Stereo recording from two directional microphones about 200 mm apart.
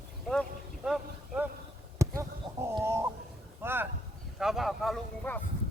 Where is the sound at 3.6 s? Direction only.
10° right (ahead or behind).